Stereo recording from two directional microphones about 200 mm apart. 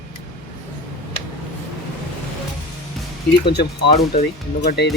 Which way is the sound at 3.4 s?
55° left (ahead or behind).